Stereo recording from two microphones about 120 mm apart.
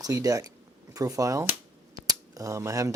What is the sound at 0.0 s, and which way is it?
Speech, 30° right (ahead or behind).